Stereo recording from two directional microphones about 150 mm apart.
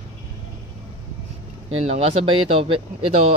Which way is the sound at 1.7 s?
40° right (ahead or behind).